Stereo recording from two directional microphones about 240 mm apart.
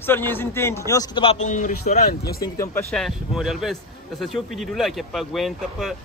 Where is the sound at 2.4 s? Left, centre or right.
Centre.